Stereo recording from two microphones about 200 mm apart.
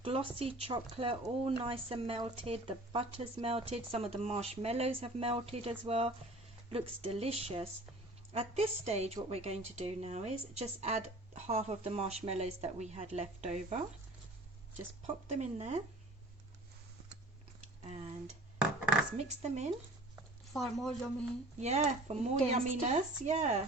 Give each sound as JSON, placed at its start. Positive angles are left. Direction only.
{"t": 0.0, "sound": "speech", "side_deg": -30}
{"t": 15.0, "sound": "speech", "side_deg": -35}
{"t": 17.8, "sound": "speech", "side_deg": -35}
{"t": 19.1, "sound": "speech", "side_deg": -35}
{"t": 20.5, "sound": "speech", "side_deg": 0}
{"t": 21.6, "sound": "speech", "side_deg": -35}